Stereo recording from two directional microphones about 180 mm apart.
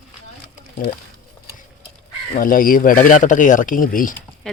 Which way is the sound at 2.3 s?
50° left (ahead or behind).